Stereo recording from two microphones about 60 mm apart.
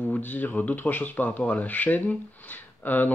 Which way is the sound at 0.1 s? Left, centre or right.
Left.